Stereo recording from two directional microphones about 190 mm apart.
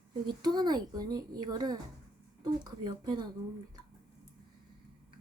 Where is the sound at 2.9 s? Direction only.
25° right (ahead or behind).